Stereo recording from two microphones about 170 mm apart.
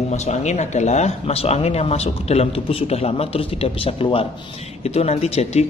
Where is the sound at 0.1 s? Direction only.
40° left (ahead or behind).